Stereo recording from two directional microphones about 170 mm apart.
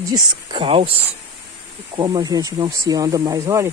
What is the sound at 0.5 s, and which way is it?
Speech, 30° right (ahead or behind).